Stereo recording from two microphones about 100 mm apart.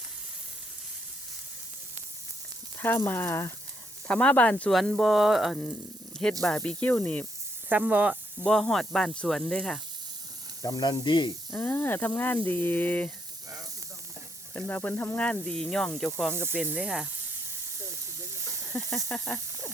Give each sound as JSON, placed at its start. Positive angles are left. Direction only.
{"t": 2.7, "sound": "speech", "side_deg": 20}
{"t": 4.1, "sound": "speech", "side_deg": 10}
{"t": 4.7, "sound": "speech", "side_deg": 0}
{"t": 7.7, "sound": "speech", "side_deg": -15}
{"t": 8.4, "sound": "speech", "side_deg": 5}
{"t": 10.6, "sound": "snake", "side_deg": 40}
{"t": 11.5, "sound": "speech", "side_deg": 15}
{"t": 14.5, "sound": "speech", "side_deg": 15}
{"t": 16.3, "sound": "speech", "side_deg": -25}
{"t": 18.7, "sound": "speech", "side_deg": 5}